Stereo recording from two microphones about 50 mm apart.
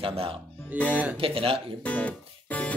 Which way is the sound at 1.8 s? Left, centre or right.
Left.